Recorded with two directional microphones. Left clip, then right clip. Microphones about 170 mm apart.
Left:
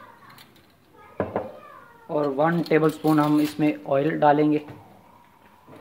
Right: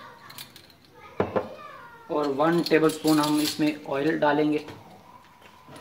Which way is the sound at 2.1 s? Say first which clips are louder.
Left 1 dB; 50° left (ahead or behind).